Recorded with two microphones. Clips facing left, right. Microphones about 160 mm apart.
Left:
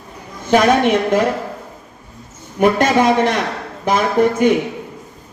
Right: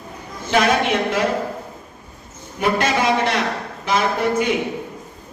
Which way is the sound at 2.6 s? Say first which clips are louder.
Left 6 dB; 50° left (ahead or behind).